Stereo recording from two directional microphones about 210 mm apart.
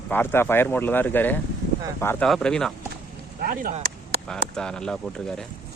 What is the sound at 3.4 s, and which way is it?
Speech, 45° right (ahead or behind).